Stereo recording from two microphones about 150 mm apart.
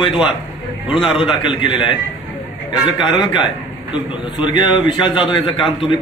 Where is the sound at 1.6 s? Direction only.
35° left (ahead or behind).